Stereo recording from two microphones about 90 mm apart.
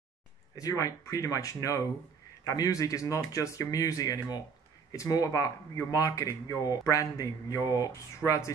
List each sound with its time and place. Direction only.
0.6 s speech: 40° left (ahead or behind)